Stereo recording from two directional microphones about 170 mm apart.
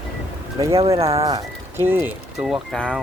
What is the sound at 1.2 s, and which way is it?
Speech, 20° right (ahead or behind).